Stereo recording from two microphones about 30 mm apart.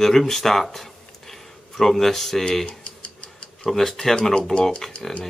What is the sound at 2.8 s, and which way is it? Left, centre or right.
Tick-tock, left.